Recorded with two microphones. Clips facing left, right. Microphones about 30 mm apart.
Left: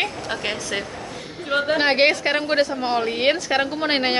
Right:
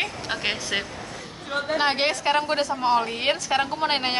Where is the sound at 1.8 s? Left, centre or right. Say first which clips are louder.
Left 4 dB; left.